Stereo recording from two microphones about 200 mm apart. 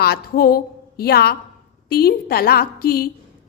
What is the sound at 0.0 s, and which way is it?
A woman's voice, 50° left (ahead or behind).